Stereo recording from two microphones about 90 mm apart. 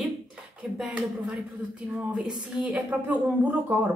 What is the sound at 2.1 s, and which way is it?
Speech, 5° right (ahead or behind).